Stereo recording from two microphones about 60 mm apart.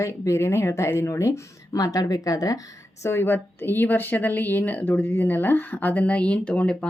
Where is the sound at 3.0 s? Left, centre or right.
Left.